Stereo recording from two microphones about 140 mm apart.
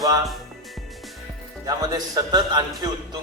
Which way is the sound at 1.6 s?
25° right (ahead or behind).